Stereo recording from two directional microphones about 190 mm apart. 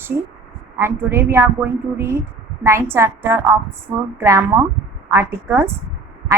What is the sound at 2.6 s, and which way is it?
A woman's voice, 15° right (ahead or behind).